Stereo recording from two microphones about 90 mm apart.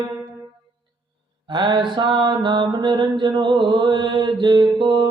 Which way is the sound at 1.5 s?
60° right (ahead or behind).